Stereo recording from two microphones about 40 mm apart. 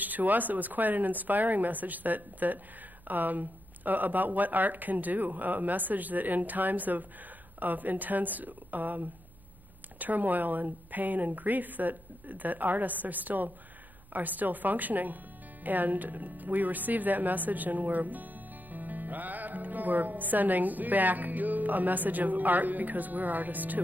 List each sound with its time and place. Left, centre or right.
0.0 s speech: right